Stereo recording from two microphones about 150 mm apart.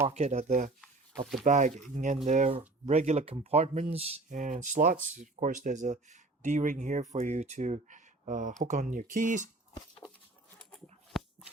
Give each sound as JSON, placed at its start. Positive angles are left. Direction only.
{"t": 0.1, "sound": "speech", "side_deg": -45}
{"t": 4.3, "sound": "speech", "side_deg": -60}
{"t": 10.5, "sound": "a sound", "side_deg": 5}